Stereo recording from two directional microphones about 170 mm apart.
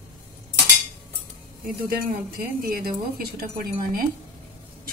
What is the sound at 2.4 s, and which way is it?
Speech, 65° right (ahead or behind).